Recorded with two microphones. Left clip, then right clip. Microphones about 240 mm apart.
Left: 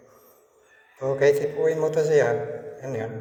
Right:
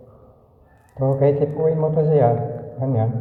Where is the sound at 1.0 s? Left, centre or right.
Left.